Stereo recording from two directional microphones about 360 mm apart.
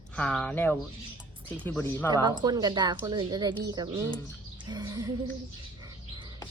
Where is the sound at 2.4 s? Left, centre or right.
Centre.